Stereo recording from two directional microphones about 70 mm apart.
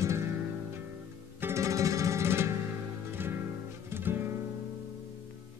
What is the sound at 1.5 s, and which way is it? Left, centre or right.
Music, right.